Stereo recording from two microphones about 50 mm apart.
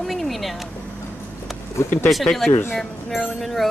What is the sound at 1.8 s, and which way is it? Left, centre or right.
Speech, left.